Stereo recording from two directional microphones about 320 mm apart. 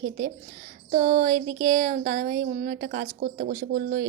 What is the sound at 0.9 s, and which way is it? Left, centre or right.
A woman's voice, right.